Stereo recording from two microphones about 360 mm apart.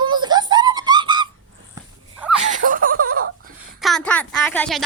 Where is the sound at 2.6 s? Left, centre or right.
Right.